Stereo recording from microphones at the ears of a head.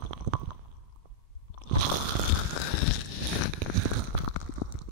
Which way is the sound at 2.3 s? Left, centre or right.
Left.